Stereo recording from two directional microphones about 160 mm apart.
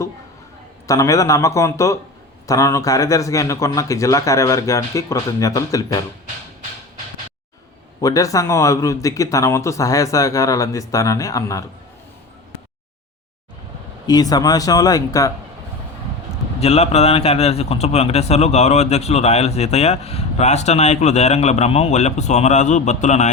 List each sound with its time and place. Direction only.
0.9 s speech: 20° left (ahead or behind)
8.0 s speech: 20° left (ahead or behind)
14.1 s speech: 25° left (ahead or behind)
16.6 s a man's voice: 40° left (ahead or behind)